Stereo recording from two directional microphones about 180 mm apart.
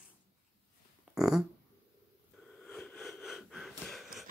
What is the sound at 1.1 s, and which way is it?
Fart, 5° right (ahead or behind).